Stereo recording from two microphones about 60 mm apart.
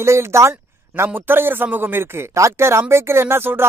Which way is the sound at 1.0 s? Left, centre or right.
Right.